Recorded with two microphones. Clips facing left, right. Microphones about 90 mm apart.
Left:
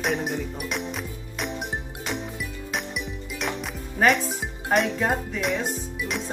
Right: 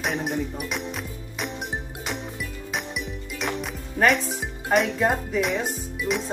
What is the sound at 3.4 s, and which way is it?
Music, centre (ahead or behind).